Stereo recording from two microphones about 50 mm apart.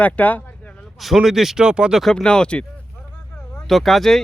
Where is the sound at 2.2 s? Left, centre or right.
Centre.